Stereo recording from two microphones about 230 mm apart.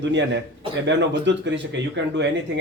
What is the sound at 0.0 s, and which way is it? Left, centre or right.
Speech, right.